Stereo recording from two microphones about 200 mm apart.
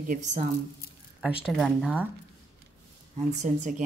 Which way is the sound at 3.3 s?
35° right (ahead or behind).